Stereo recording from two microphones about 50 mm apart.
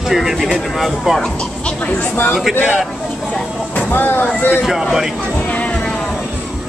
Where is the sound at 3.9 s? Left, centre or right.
Left.